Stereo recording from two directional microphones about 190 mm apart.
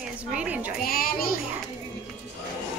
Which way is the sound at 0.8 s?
50° left (ahead or behind).